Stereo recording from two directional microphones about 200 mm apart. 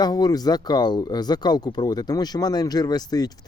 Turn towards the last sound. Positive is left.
turn(degrees=20)  # may be behind; listen again after turning